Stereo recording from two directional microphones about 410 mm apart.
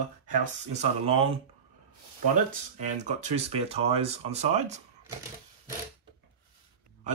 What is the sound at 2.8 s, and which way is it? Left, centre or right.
Speech, centre.